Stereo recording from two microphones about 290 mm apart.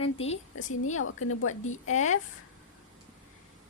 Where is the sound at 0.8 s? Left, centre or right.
Left.